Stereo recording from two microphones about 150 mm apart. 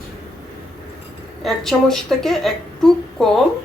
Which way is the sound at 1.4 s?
Centre (ahead or behind).